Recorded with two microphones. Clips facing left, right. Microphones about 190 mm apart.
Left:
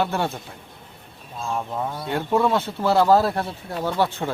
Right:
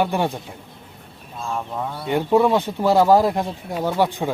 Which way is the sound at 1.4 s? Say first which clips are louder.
Even; 5° left (ahead or behind).